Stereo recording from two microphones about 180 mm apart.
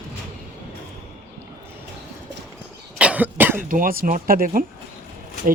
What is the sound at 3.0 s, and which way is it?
Cough, 10° right (ahead or behind).